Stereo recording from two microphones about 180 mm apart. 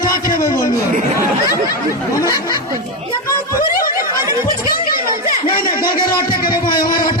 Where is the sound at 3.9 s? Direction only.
15° right (ahead or behind).